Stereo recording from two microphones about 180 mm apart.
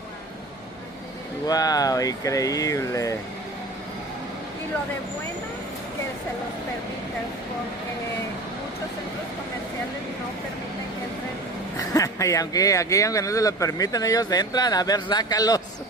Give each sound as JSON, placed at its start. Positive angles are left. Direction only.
{"t": 1.5, "sound": "speech", "side_deg": 20}
{"t": 11.7, "sound": "speech", "side_deg": 20}